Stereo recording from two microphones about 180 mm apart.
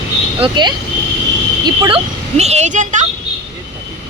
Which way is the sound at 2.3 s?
35° right (ahead or behind).